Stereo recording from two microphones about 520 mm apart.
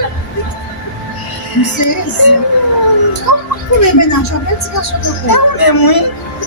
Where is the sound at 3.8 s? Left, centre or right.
Left.